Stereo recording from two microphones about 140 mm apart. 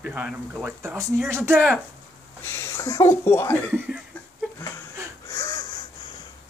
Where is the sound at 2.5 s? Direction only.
25° left (ahead or behind).